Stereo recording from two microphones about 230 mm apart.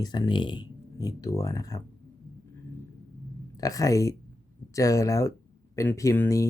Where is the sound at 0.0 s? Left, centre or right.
Centre.